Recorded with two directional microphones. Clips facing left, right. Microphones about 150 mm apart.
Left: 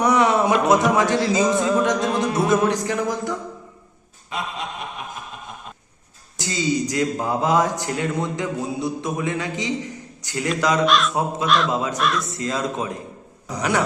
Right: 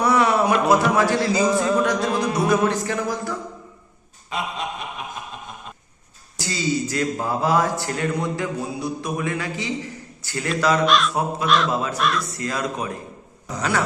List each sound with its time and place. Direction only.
0.0 s a sound: 20° left (ahead or behind)
0.5 s music: centre (ahead or behind)
2.6 s music: 15° left (ahead or behind)
6.4 s a man's voice: 20° left (ahead or behind)
10.8 s music: centre (ahead or behind)
11.1 s a man's voice: 20° left (ahead or behind)
11.4 s music: centre (ahead or behind)
11.7 s a man's voice: 20° left (ahead or behind)
11.9 s music: centre (ahead or behind)
12.3 s a man's voice: 25° left (ahead or behind)
13.6 s music: 20° left (ahead or behind)